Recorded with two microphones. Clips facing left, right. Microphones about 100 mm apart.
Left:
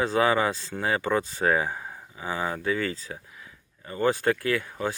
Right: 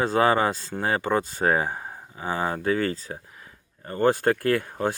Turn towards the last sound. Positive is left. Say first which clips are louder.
# right 4 dB
turn(degrees=-45)  # may be behind; listen again after turning